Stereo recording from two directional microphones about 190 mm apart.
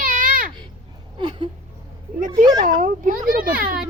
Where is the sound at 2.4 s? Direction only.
20° right (ahead or behind).